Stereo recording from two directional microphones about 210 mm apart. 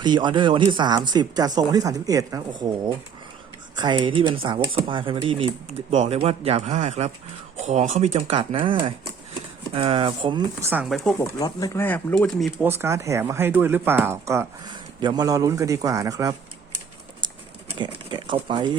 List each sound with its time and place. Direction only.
0.0 s speech: 20° right (ahead or behind)
10.6 s speech: 10° right (ahead or behind)
10.8 s speech: centre (ahead or behind)
11.2 s speech: 20° left (ahead or behind)
12.8 s speech: 15° right (ahead or behind)
17.2 s bird: 20° right (ahead or behind)
17.8 s speech: 20° right (ahead or behind)